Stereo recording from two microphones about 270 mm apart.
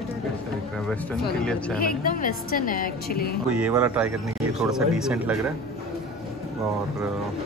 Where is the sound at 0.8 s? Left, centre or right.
Centre.